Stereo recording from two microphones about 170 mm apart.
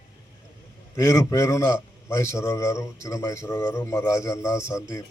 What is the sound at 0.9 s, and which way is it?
A man's voice, 15° left (ahead or behind).